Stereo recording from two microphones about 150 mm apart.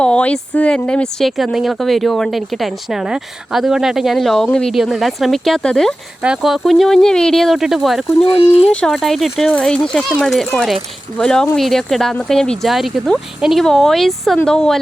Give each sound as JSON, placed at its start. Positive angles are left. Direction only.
{"t": 0.0, "sound": "speech", "side_deg": 5}
{"t": 8.2, "sound": "speech", "side_deg": 35}
{"t": 8.6, "sound": "speech", "side_deg": 5}